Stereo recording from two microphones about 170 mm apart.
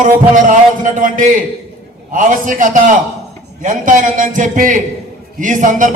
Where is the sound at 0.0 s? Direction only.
50° right (ahead or behind).